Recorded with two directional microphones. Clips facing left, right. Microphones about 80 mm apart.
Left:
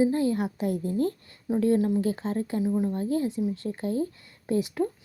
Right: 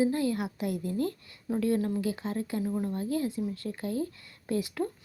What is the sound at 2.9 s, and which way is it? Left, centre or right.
A woman's voice, left.